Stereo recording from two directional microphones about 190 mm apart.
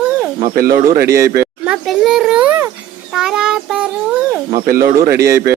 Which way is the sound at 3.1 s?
5° right (ahead or behind).